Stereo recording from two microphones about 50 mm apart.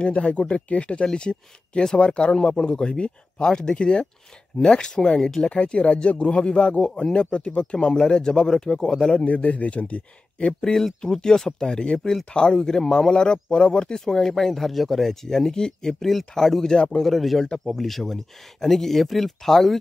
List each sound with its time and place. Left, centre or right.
0.0 s speech: left
9.3 s speech: left
10.6 s speech: centre